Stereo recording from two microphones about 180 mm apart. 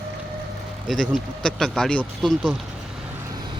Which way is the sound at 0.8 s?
Centre (ahead or behind).